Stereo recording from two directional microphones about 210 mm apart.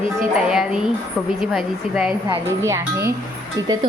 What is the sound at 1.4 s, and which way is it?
Speech, centre (ahead or behind).